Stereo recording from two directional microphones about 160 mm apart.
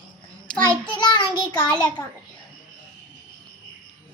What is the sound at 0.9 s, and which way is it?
Child singing, 30° left (ahead or behind).